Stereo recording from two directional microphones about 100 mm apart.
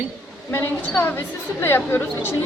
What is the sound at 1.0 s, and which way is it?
A woman's voice, 20° left (ahead or behind).